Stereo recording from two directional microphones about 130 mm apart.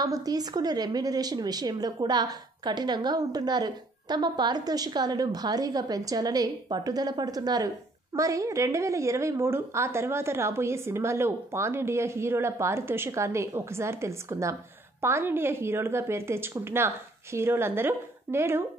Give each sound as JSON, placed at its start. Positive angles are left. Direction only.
{"t": 0.0, "sound": "a woman's voice", "side_deg": -30}